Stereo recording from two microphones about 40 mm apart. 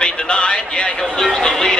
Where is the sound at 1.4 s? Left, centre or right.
Centre.